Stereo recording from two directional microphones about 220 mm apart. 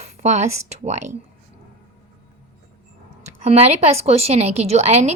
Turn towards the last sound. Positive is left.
turn(degrees=-30)  # may be behind; listen again after turning